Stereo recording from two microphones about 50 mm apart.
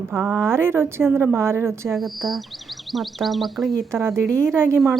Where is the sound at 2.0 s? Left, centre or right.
Centre.